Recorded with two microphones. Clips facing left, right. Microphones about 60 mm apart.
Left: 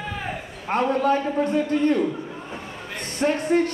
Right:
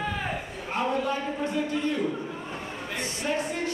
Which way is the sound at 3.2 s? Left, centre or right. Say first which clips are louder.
Left 10 dB; left.